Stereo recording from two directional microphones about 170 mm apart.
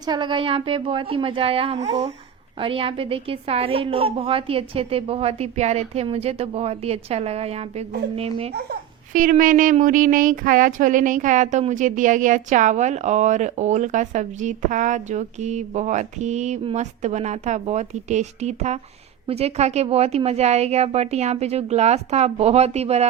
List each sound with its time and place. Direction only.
0.0 s a woman's voice: 25° right (ahead or behind)
8.5 s a woman's voice: 60° right (ahead or behind); by 23.0 s 40° right (ahead or behind)